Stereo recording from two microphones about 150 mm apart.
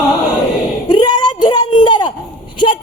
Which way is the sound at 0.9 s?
30° left (ahead or behind).